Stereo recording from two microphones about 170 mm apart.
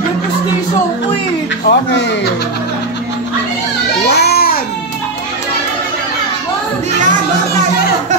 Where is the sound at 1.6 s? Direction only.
75° left (ahead or behind).